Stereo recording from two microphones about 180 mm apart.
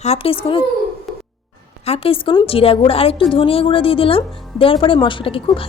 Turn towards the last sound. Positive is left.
turn(degrees=30)  # may be behind; listen again after turning